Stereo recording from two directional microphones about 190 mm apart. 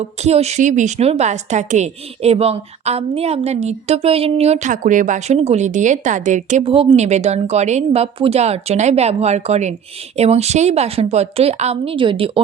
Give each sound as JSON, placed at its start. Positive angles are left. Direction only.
{"t": 0.0, "sound": "a woman's voice", "side_deg": -35}